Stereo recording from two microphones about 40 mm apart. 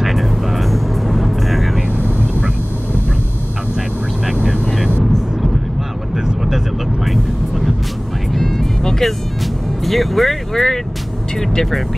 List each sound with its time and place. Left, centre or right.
0.0 s vehicle: centre
2.0 s vehicle: right
4.4 s vehicle: right
7.1 s vehicle: centre
8.3 s music: centre